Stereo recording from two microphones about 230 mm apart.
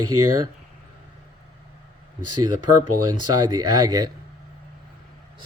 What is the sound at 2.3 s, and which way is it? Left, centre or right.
Speech, right.